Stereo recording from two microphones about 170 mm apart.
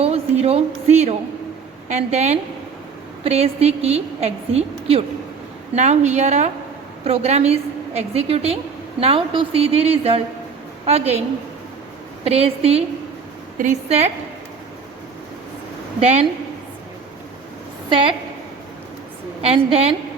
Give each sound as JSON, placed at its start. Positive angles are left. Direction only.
{"t": 0.0, "sound": "a sound", "side_deg": -40}
{"t": 1.9, "sound": "a woman's voice", "side_deg": -40}
{"t": 12.2, "sound": "a woman's voice", "side_deg": -35}
{"t": 16.0, "sound": "a woman's voice", "side_deg": -40}
{"t": 17.8, "sound": "a woman's voice", "side_deg": -30}
{"t": 19.4, "sound": "a woman's voice", "side_deg": -35}